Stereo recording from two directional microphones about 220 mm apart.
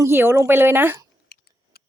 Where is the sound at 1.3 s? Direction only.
45° left (ahead or behind).